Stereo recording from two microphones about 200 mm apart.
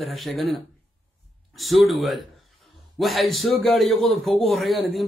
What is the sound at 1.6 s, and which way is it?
A man's voice, centre (ahead or behind).